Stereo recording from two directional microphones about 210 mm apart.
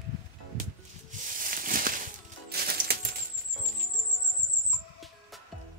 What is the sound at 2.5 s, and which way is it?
Music, 45° right (ahead or behind).